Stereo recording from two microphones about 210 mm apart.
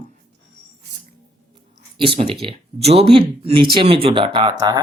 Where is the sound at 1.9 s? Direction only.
25° right (ahead or behind).